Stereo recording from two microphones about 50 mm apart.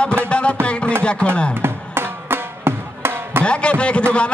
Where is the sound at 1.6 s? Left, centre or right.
Right.